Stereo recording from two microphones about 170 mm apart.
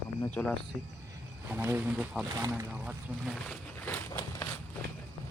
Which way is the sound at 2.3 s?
20° right (ahead or behind).